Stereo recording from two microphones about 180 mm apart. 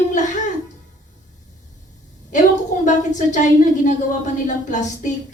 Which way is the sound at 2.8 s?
45° left (ahead or behind).